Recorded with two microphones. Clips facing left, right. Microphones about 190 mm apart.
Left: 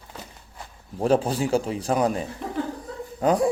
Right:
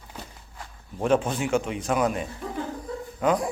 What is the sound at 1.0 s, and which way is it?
Speech, 35° left (ahead or behind).